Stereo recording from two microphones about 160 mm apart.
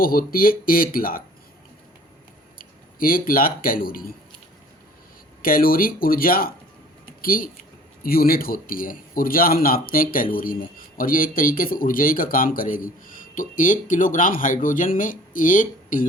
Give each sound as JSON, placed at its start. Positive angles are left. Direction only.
{"t": 0.0, "sound": "speech", "side_deg": 65}
{"t": 2.6, "sound": "speech", "side_deg": 65}
{"t": 5.4, "sound": "speech", "side_deg": 65}